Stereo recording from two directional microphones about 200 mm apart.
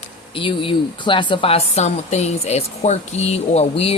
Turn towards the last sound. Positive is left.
turn(degrees=30)  # may be behind; listen again after turning